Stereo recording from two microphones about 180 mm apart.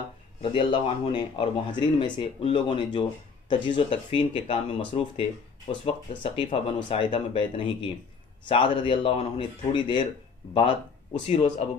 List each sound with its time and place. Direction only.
0.4 s speech: 30° left (ahead or behind)
11.2 s speech: 35° left (ahead or behind)